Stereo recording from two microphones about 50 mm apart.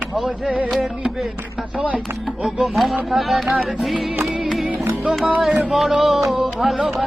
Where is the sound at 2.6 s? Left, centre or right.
Centre.